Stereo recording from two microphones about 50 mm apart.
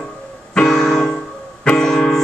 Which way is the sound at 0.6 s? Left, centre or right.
Centre.